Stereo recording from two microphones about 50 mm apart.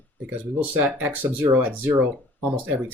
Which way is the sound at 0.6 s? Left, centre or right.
Right.